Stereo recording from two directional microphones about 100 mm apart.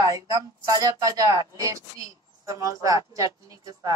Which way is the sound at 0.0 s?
35° right (ahead or behind).